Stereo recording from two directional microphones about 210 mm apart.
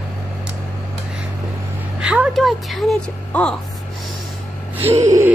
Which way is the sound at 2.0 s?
5° right (ahead or behind).